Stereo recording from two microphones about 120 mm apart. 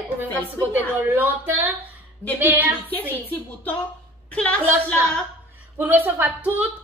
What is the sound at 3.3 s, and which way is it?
A woman's voice, 15° left (ahead or behind).